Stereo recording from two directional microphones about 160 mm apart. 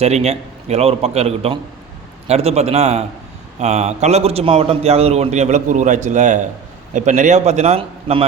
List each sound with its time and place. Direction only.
0.0 s a man's voice: 40° right (ahead or behind)